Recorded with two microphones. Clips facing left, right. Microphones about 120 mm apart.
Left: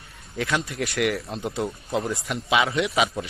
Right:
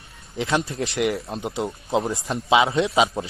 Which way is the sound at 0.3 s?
25° right (ahead or behind).